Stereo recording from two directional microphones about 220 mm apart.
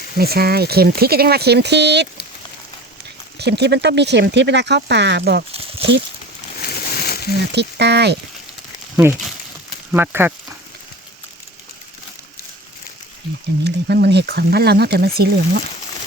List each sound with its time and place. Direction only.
0.2 s speech: 45° right (ahead or behind)
3.3 s speech: 50° right (ahead or behind)
5.5 s a sound: 25° right (ahead or behind)
6.6 s a sound: 45° left (ahead or behind)
7.5 s speech: 50° right (ahead or behind)
9.9 s speech: 10° right (ahead or behind)
13.7 s speech: 45° right (ahead or behind)